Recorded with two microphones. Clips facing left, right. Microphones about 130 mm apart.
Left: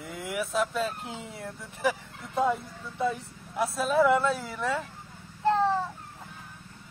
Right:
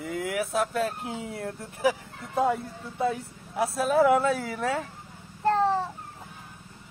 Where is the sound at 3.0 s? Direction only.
55° right (ahead or behind).